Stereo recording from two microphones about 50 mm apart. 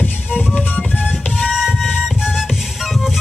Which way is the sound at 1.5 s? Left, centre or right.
Centre.